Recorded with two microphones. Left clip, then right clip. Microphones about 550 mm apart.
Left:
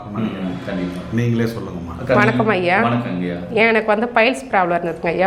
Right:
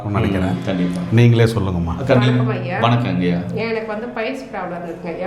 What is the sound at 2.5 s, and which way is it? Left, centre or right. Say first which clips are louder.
A woman's voice: left 3 dB; left.